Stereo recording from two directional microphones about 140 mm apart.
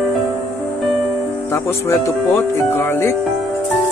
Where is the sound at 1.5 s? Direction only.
20° left (ahead or behind).